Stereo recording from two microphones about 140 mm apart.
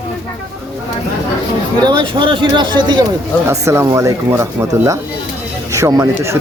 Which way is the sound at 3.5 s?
20° right (ahead or behind).